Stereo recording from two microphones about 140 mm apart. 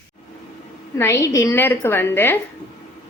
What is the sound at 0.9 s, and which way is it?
A woman's voice, 20° left (ahead or behind).